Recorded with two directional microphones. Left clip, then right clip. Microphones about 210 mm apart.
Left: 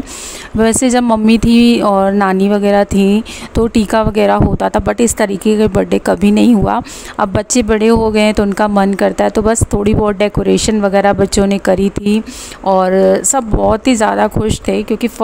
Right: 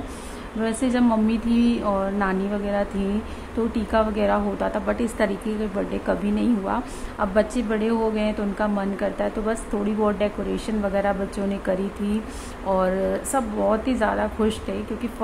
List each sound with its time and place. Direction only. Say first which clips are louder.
0.6 s speech: left 12 dB; 55° left (ahead or behind)